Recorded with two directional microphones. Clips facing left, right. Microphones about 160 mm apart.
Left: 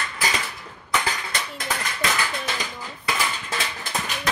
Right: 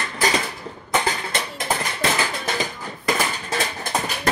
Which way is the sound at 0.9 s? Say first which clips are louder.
Right 4 dB; 30° right (ahead or behind).